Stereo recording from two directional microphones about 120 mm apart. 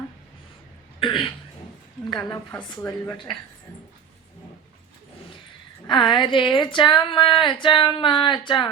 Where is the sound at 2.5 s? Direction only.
15° left (ahead or behind).